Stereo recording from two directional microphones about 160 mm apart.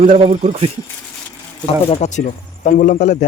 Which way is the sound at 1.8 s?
40° left (ahead or behind).